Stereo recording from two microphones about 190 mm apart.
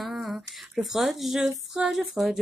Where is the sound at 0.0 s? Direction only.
Centre (ahead or behind).